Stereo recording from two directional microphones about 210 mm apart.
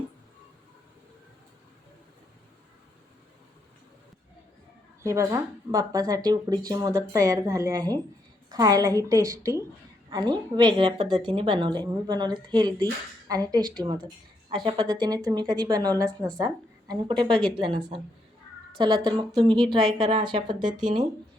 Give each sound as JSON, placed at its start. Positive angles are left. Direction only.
{"t": 5.0, "sound": "a woman's voice", "side_deg": -15}